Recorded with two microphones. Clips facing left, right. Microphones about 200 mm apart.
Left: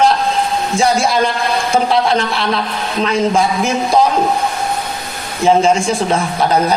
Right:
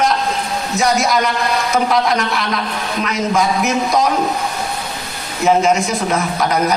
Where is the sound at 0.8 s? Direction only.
30° left (ahead or behind).